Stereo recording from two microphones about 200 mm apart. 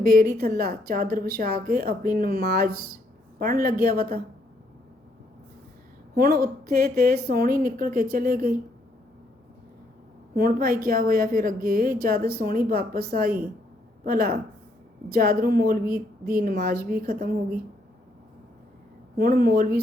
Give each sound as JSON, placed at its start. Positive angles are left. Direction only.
{"t": 0.2, "sound": "a woman's voice", "side_deg": -45}
{"t": 6.1, "sound": "a woman's voice", "side_deg": -50}
{"t": 10.3, "sound": "a woman's voice", "side_deg": -50}
{"t": 19.1, "sound": "a woman's voice", "side_deg": -50}